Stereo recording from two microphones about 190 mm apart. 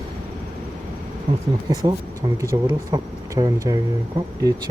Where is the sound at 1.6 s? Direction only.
20° right (ahead or behind).